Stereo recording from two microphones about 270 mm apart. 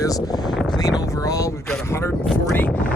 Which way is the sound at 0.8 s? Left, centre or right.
Centre.